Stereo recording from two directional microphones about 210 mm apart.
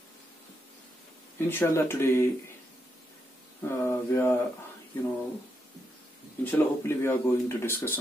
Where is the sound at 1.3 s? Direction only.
10° left (ahead or behind).